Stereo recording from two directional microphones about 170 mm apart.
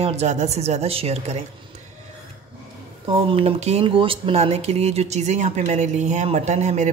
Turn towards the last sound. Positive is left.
turn(degrees=-45)  # may be behind; listen again after turning